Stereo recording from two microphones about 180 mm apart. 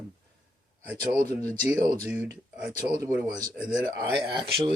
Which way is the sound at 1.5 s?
20° right (ahead or behind).